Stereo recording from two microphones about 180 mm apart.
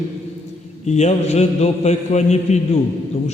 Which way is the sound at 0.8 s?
40° left (ahead or behind).